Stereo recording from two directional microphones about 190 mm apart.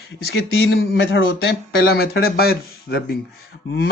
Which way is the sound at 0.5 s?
75° left (ahead or behind).